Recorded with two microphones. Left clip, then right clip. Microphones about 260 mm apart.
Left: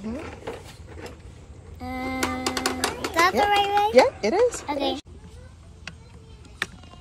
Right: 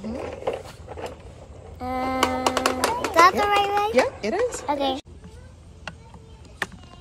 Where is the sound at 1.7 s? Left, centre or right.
Centre.